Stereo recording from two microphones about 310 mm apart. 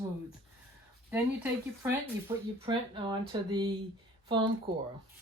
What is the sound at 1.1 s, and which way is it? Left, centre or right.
Speech, centre.